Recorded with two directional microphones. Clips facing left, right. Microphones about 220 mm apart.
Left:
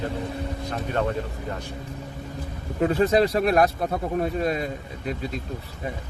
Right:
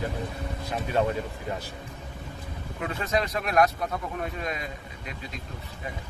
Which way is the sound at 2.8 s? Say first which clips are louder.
Left 9 dB; 35° left (ahead or behind).